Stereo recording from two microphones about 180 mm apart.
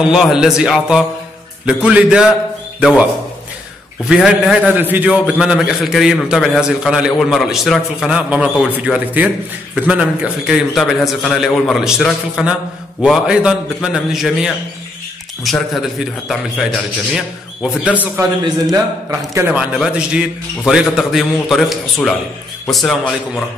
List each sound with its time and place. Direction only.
0.0 s a man's voice: 5° right (ahead or behind)
4.1 s a man's voice: 5° right (ahead or behind)